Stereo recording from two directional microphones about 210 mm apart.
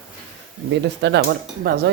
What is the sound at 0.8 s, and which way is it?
Speech, 55° right (ahead or behind).